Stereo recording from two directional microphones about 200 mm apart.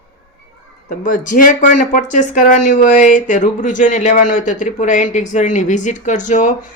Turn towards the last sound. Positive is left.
turn(degrees=40)  # may be behind; listen again after turning